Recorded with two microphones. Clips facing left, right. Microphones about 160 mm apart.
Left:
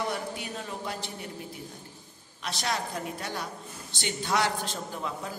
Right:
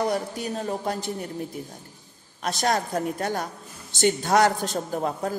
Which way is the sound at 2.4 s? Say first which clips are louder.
Right 7 dB; 45° right (ahead or behind).